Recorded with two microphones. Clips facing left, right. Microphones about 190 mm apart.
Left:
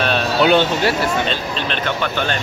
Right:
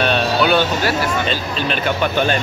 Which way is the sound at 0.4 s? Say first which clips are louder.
Left 5 dB; 25° left (ahead or behind).